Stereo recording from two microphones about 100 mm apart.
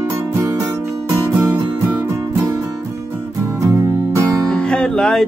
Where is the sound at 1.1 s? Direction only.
30° right (ahead or behind).